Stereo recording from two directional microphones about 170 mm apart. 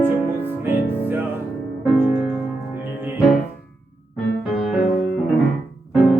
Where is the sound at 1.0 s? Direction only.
10° right (ahead or behind).